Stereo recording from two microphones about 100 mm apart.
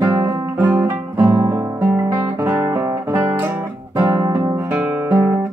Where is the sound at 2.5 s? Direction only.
30° right (ahead or behind).